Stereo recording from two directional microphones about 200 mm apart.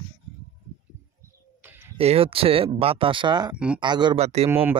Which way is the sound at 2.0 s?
30° right (ahead or behind).